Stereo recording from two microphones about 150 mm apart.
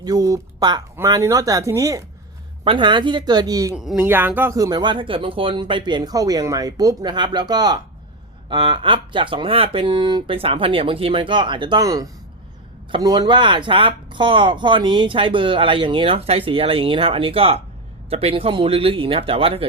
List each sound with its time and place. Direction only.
0.0 s speech: 25° right (ahead or behind)
2.6 s speech: 30° right (ahead or behind)
3.8 s speech: 5° right (ahead or behind)
4.0 s speech: 15° right (ahead or behind); by 19.6 s 40° right (ahead or behind)